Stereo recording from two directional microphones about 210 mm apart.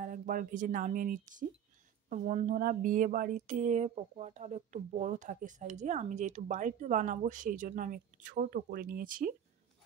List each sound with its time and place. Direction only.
0.0 s speech: 40° right (ahead or behind)